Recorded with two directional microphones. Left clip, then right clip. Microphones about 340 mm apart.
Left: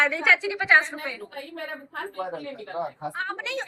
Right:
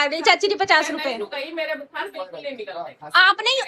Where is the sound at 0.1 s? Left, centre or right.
Right.